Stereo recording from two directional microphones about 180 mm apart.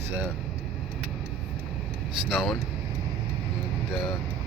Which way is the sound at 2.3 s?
Centre (ahead or behind).